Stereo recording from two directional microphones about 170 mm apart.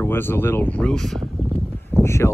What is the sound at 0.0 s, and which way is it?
Speech, 15° left (ahead or behind).